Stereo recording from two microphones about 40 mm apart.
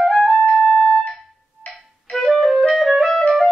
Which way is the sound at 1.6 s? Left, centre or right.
Left.